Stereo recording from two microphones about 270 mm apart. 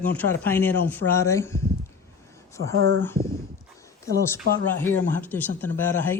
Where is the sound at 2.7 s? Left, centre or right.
Right.